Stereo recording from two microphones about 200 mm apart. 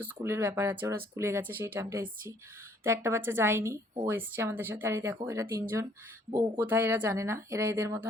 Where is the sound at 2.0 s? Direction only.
45° right (ahead or behind).